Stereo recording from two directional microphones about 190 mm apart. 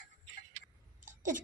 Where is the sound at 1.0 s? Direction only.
45° right (ahead or behind).